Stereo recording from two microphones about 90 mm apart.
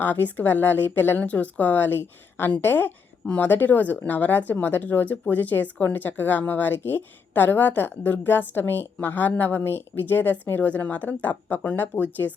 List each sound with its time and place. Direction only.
0.0 s a woman's voice: 20° left (ahead or behind)